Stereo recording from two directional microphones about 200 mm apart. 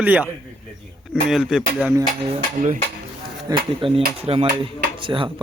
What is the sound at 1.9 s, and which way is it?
Speech, 25° right (ahead or behind).